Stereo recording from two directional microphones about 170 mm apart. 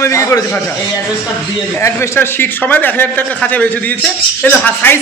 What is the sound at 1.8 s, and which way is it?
A man's voice, 15° left (ahead or behind).